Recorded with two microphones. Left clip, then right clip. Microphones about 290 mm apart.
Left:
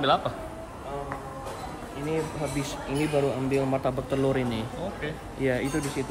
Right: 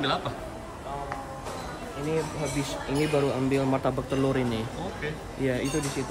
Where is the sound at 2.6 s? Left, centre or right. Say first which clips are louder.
Right 3 dB; centre.